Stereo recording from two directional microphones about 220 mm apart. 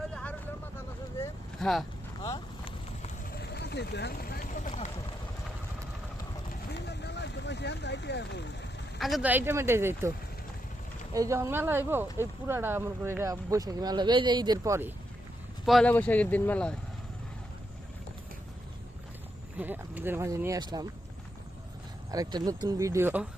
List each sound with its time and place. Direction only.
0.1 s vehicle: 5° left (ahead or behind)
2.2 s vehicle: 15° left (ahead or behind)
3.3 s vehicle: 50° left (ahead or behind)
6.7 s vehicle: 50° left (ahead or behind)
9.0 s speech: centre (ahead or behind)
11.1 s speech: 15° right (ahead or behind)
15.6 s speech: centre (ahead or behind)
19.5 s speech: 10° right (ahead or behind)
22.1 s speech: 15° right (ahead or behind)